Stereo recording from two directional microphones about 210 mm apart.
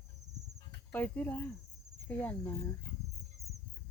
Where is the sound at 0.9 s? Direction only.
10° left (ahead or behind).